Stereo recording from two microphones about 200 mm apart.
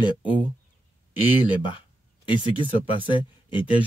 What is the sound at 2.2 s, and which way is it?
Speech, 25° left (ahead or behind).